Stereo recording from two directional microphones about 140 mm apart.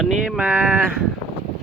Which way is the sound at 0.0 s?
Centre (ahead or behind).